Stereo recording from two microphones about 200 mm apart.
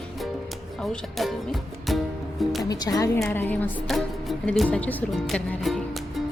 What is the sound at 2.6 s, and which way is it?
Speech, 20° left (ahead or behind).